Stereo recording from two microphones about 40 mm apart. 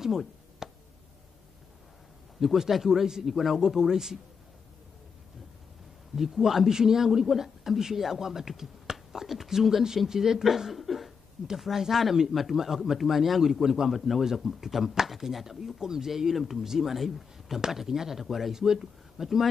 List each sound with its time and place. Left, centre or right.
0.0 s a sound: centre
2.4 s a man's voice: centre
6.1 s a man's voice: centre